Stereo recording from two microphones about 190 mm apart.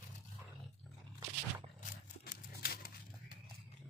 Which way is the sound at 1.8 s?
45° left (ahead or behind).